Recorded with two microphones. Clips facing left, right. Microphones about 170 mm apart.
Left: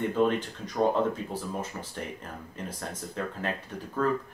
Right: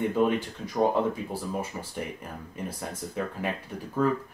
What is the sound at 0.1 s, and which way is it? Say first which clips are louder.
Speech: right 1 dB; 10° right (ahead or behind).